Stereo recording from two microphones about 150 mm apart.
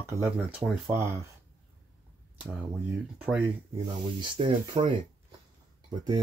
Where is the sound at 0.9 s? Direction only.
20° right (ahead or behind).